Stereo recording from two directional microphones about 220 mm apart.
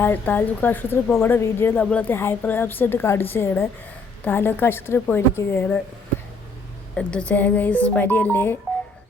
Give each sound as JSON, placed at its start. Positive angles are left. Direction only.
{"t": 0.0, "sound": "a woman's voice", "side_deg": 10}
{"t": 6.9, "sound": "a woman's voice", "side_deg": 5}